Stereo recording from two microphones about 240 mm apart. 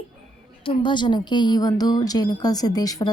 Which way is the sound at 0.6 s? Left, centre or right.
Left.